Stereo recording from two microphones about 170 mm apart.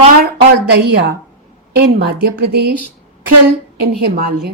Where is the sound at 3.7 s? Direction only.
70° right (ahead or behind).